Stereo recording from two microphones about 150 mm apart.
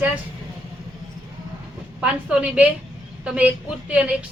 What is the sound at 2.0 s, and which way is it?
A woman's voice, 5° right (ahead or behind).